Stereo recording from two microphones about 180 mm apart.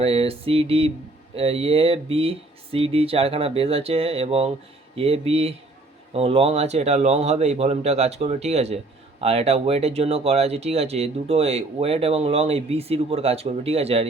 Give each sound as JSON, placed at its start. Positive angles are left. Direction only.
{"t": 0.0, "sound": "speech", "side_deg": -30}